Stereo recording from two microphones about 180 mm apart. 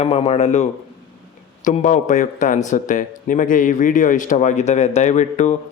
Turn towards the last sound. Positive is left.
turn(degrees=40)  # may be behind; listen again after turning